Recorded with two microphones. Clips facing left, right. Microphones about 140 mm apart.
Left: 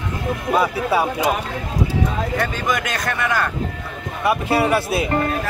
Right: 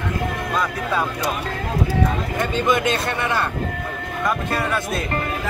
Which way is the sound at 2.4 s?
25° right (ahead or behind).